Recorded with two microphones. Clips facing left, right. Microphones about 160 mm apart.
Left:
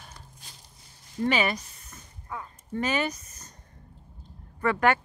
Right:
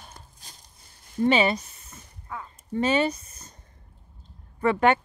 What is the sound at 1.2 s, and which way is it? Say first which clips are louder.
Speech: right 4 dB; 25° right (ahead or behind).